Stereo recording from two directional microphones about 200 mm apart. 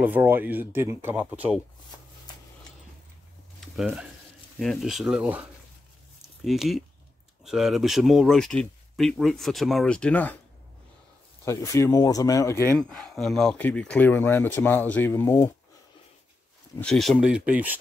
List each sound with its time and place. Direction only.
0.0 s speech: 10° right (ahead or behind)
3.6 s speech: centre (ahead or behind)
11.4 s speech: 15° left (ahead or behind)
12.7 s speech: centre (ahead or behind)
16.8 s speech: centre (ahead or behind)